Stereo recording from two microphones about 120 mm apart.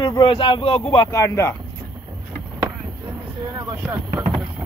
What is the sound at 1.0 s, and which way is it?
Speech, 25° left (ahead or behind).